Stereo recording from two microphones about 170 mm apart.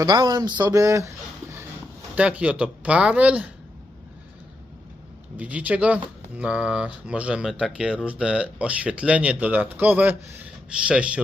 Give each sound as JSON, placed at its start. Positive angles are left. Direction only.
{"t": 0.0, "sound": "a man's voice", "side_deg": -25}
{"t": 5.4, "sound": "speech", "side_deg": -10}